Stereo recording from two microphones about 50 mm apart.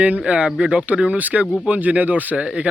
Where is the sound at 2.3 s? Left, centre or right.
Right.